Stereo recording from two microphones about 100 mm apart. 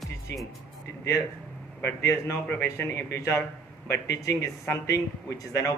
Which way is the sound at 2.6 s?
20° left (ahead or behind).